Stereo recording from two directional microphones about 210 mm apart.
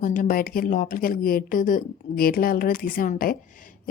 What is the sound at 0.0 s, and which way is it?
Speech, 40° left (ahead or behind).